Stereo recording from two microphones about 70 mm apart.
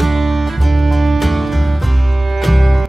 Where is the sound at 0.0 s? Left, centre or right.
Centre.